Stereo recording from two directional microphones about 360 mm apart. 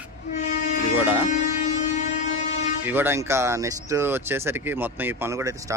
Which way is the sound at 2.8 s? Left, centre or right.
Centre.